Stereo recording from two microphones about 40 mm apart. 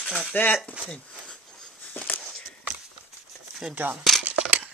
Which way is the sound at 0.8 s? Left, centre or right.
Right.